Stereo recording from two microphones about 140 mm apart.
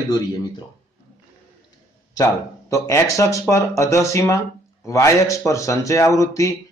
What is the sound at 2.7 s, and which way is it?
Speech, 20° left (ahead or behind).